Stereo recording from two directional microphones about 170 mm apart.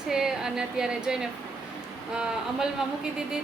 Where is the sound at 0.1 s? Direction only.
5° right (ahead or behind).